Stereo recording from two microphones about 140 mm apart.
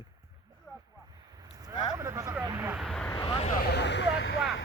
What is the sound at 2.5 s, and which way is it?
Speech, 15° right (ahead or behind).